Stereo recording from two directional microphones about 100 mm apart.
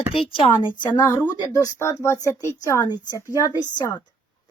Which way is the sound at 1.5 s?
30° left (ahead or behind).